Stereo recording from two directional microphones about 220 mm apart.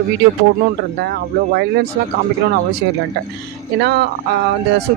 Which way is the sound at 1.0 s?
45° right (ahead or behind).